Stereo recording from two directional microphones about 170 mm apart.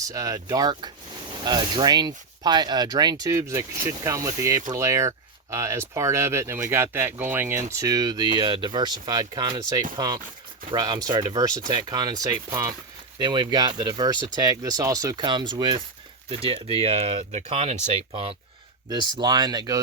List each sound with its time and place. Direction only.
0.0 s speech: 20° right (ahead or behind); by 17.7 s 35° right (ahead or behind)
18.9 s speech: 25° right (ahead or behind)